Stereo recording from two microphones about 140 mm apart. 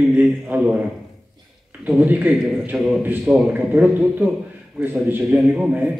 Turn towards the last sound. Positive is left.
turn(degrees=-10)  # may be behind; listen again after turning